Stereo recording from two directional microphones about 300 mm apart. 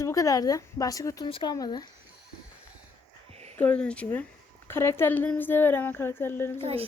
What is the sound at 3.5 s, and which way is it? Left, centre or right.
A woman's voice, centre.